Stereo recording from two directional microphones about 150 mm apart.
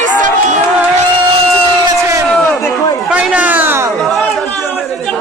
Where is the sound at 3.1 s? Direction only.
5° right (ahead or behind).